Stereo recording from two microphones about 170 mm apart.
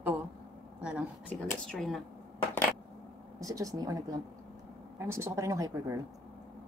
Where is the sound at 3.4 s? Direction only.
20° right (ahead or behind).